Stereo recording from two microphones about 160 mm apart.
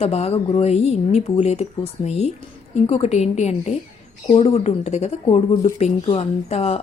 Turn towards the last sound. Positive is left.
turn(degrees=40)  # may be behind; listen again after turning